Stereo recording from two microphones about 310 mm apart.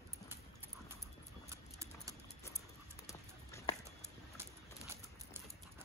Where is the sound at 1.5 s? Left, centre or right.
Centre.